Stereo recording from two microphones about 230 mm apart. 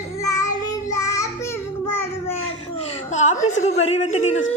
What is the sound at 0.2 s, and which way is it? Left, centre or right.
Child singing, centre.